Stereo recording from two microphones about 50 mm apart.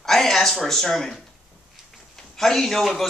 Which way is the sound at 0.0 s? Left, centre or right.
Centre.